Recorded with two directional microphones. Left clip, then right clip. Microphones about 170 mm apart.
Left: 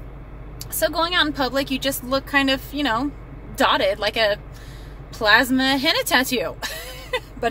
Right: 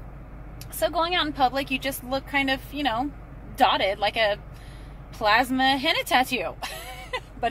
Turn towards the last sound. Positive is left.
turn(degrees=15)  # may be behind; listen again after turning